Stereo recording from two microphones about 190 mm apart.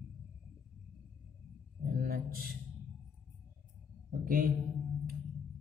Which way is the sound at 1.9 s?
50° right (ahead or behind).